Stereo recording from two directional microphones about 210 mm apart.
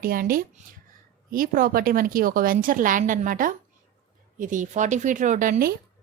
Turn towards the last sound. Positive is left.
turn(degrees=-40)  # may be behind; listen again after turning